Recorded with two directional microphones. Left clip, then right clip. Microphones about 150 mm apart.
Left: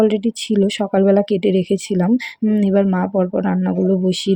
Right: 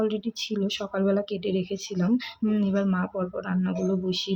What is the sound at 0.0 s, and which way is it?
Speech, 45° left (ahead or behind).